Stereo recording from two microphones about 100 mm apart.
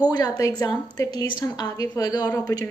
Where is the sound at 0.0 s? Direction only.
40° left (ahead or behind).